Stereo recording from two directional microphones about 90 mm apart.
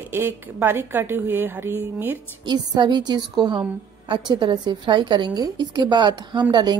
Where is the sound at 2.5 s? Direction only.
55° right (ahead or behind).